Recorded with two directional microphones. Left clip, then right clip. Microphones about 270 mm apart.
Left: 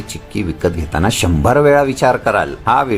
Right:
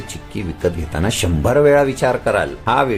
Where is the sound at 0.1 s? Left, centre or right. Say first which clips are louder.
Left 8 dB; centre.